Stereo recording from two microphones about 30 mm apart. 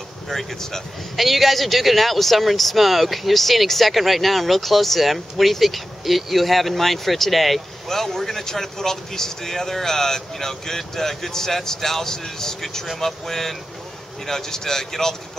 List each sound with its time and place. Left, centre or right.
0.3 s speech: centre
1.1 s speech: centre